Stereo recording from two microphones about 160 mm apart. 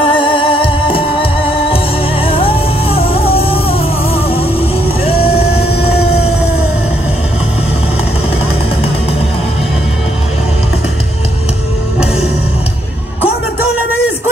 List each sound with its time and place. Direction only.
0.0 s music: 35° left (ahead or behind)
5.0 s vehicle: 40° left (ahead or behind)